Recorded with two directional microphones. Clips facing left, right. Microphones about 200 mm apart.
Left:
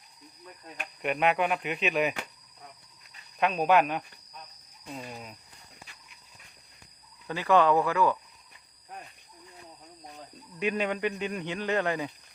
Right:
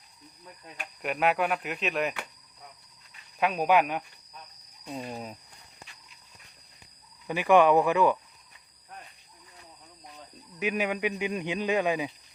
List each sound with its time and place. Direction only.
1.0 s speech: centre (ahead or behind)
3.4 s speech: 10° right (ahead or behind)
5.0 s speech: 40° right (ahead or behind)
7.3 s speech: 15° right (ahead or behind)
10.6 s speech: 5° right (ahead or behind)